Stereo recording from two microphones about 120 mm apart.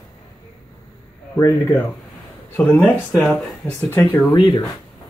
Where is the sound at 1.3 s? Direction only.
25° left (ahead or behind).